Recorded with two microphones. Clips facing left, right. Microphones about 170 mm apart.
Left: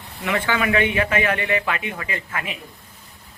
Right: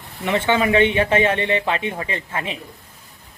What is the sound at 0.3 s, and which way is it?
A man's voice, 25° right (ahead or behind).